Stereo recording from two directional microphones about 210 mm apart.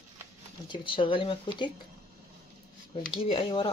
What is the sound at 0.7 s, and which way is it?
Speech, 25° left (ahead or behind).